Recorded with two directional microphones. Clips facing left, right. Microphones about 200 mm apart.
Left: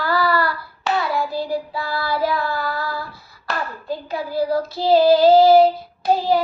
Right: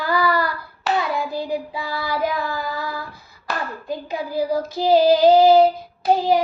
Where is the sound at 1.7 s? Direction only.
15° right (ahead or behind).